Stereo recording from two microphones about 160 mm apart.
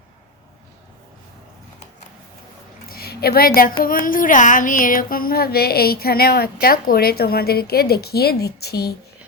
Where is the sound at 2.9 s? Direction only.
75° left (ahead or behind).